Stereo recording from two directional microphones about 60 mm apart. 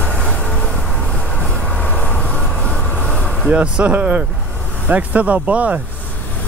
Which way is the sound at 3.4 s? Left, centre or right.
Right.